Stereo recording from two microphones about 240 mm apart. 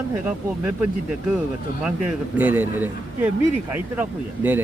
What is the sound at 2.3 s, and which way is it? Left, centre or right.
Speech, centre.